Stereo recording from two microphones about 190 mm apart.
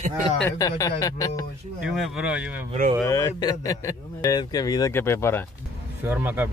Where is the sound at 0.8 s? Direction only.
20° left (ahead or behind).